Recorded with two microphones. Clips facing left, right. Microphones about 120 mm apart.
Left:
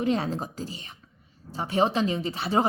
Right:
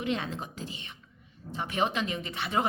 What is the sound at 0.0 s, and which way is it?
A woman's voice, 40° left (ahead or behind).